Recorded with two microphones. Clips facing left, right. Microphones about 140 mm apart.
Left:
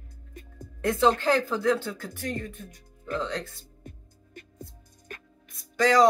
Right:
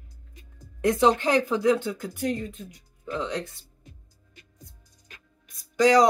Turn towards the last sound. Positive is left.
turn(degrees=-15)  # may be behind; listen again after turning